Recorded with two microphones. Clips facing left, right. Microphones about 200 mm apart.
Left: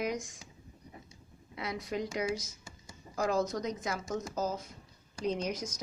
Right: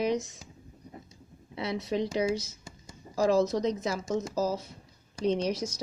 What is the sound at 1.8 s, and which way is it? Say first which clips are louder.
Speech: right 6 dB; 30° right (ahead or behind).